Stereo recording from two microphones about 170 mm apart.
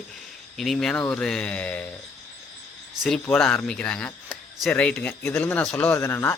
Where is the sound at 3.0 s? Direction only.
5° left (ahead or behind).